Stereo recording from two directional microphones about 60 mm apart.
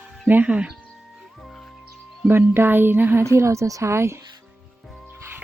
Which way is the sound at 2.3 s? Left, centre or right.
Right.